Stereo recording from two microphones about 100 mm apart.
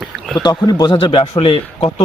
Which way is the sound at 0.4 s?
45° left (ahead or behind).